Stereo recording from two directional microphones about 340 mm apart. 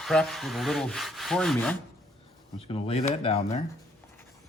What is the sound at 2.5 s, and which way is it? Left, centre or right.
Speech, centre.